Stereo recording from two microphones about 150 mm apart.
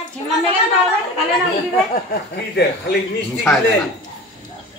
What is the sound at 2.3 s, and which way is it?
Speech, 90° left.